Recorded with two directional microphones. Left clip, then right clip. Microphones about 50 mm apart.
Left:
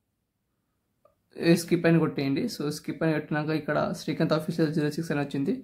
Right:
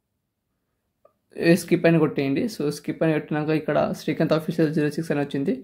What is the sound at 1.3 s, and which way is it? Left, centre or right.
Speech, right.